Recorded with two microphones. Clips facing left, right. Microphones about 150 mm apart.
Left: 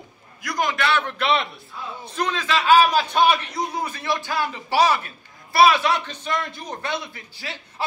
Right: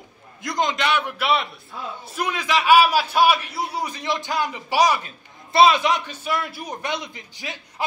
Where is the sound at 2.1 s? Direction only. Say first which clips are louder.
Even; 10° right (ahead or behind).